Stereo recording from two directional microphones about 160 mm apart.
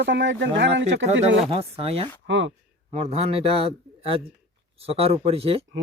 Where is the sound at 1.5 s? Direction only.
35° right (ahead or behind).